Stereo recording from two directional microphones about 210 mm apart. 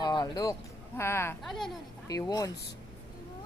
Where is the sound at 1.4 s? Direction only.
Centre (ahead or behind).